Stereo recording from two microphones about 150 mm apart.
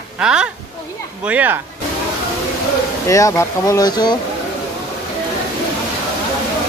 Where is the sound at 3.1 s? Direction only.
20° left (ahead or behind).